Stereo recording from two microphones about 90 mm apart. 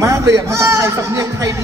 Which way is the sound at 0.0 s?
35° right (ahead or behind).